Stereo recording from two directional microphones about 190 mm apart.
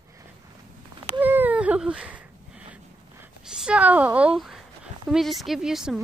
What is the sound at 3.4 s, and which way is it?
A woman's voice, 5° right (ahead or behind).